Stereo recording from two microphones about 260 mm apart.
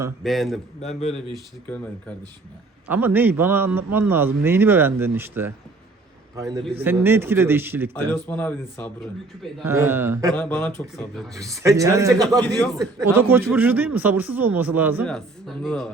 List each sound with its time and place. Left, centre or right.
0.2 s speech: centre
0.8 s a man's voice: left
1.1 s speech: centre
2.9 s a man's voice: centre
7.9 s speech: centre
9.6 s speech: centre
10.3 s speech: centre
11.3 s speech: centre
12.5 s speech: centre
12.8 s speech: centre